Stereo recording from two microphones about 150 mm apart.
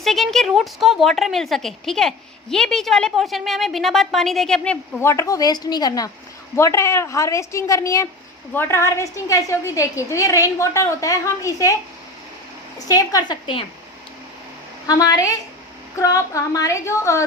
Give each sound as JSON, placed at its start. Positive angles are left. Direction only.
{"t": 0.0, "sound": "a woman's voice", "side_deg": 0}
{"t": 12.9, "sound": "a woman's voice", "side_deg": 25}
{"t": 14.8, "sound": "a woman's voice", "side_deg": 25}